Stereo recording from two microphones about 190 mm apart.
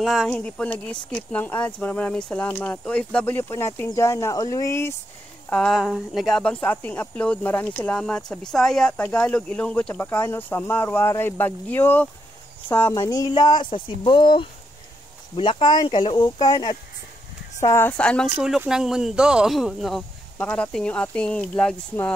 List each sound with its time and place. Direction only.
0.0 s speech: centre (ahead or behind)
5.5 s speech: centre (ahead or behind)